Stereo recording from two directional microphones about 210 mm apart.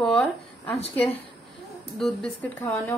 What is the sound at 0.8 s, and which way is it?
Speech, 30° left (ahead or behind).